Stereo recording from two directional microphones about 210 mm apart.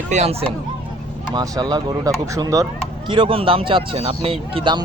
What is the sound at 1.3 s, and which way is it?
Speech, 20° right (ahead or behind).